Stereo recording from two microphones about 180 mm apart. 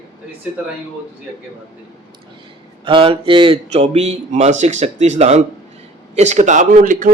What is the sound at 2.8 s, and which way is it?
Speech, 30° right (ahead or behind).